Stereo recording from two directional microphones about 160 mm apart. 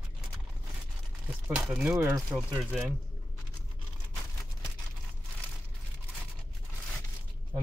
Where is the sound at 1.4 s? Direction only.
10° right (ahead or behind).